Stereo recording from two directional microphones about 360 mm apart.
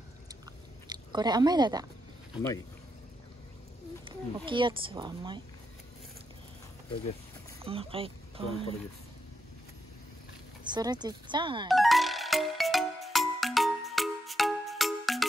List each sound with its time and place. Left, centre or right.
0.8 s speech: centre
2.3 s speech: centre
4.0 s speech: centre
7.6 s speech: centre
10.7 s speech: centre
11.7 s music: centre